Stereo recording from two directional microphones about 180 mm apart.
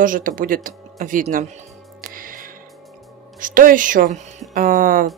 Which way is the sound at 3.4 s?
50° right (ahead or behind).